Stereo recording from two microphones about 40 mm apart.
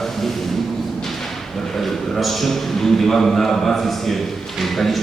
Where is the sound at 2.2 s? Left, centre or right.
Centre.